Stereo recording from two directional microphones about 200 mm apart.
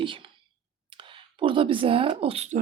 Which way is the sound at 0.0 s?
25° right (ahead or behind).